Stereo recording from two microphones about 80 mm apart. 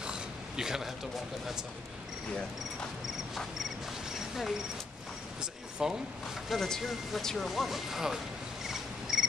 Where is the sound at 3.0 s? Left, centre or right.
Centre.